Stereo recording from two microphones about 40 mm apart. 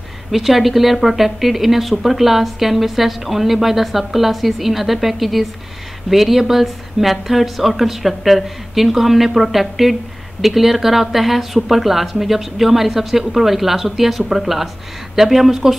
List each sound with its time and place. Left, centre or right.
0.3 s speech: centre